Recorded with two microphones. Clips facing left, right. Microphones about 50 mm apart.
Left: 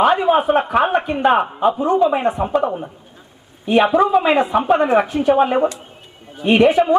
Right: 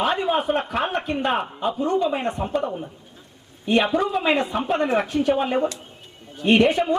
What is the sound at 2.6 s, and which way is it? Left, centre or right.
Speech, left.